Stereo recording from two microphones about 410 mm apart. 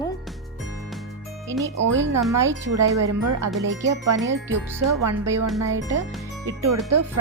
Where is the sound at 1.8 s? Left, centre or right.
Right.